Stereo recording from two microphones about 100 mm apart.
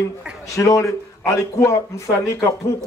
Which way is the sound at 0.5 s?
30° left (ahead or behind).